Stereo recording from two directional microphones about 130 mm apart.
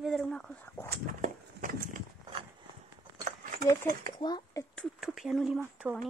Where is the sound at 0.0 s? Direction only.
Centre (ahead or behind).